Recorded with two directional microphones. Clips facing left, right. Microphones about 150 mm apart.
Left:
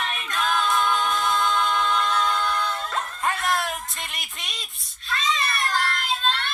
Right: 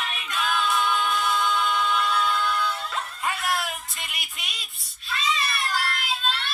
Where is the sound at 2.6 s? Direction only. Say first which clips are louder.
Left 1 dB; 45° left (ahead or behind).